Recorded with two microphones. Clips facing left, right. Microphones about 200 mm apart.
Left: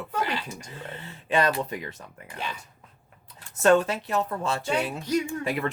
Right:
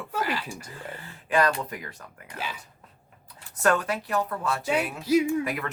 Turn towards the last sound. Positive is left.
turn(degrees=30)  # may be behind; listen again after turning